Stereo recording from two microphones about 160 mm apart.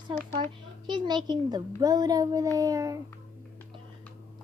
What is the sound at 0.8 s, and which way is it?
A child's voice, 30° right (ahead or behind).